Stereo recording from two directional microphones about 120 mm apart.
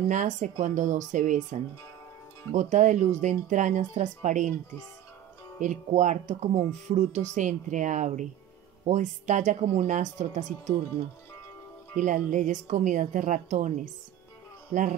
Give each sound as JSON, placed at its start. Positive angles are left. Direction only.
{"t": 0.1, "sound": "speech", "side_deg": -90}
{"t": 5.6, "sound": "speech", "side_deg": -90}
{"t": 12.0, "sound": "a man's voice", "side_deg": -90}